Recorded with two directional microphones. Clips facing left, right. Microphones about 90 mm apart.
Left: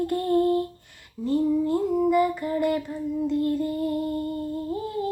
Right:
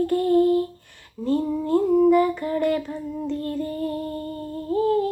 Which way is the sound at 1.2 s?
40° right (ahead or behind).